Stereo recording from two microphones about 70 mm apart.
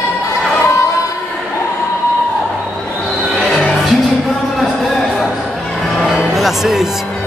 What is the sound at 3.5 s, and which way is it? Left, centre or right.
Music, centre.